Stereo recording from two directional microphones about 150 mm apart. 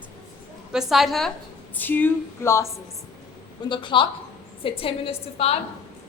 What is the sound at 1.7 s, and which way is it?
Speech, 10° left (ahead or behind).